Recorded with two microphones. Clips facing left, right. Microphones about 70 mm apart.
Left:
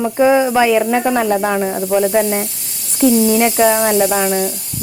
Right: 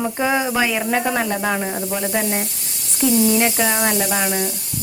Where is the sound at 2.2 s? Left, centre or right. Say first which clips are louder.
Left 6 dB; centre.